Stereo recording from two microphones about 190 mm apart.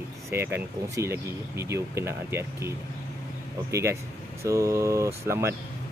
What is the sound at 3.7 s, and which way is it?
Speech, 15° right (ahead or behind).